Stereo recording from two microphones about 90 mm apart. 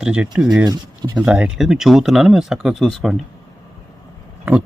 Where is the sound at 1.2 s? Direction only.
10° right (ahead or behind).